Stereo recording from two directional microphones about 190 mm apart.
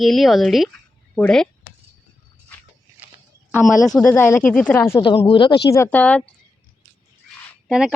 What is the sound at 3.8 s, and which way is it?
Speech, 5° left (ahead or behind).